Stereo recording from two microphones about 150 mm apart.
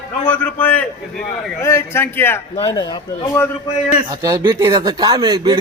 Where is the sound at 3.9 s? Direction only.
25° right (ahead or behind).